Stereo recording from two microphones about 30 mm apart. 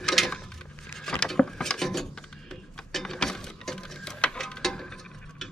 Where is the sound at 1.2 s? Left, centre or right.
Left.